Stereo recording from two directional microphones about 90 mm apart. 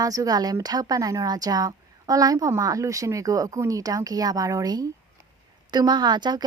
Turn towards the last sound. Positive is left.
turn(degrees=-55)  # may be behind; listen again after turning